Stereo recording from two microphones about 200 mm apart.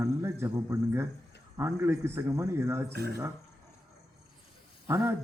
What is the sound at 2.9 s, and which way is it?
Speech, 55° right (ahead or behind).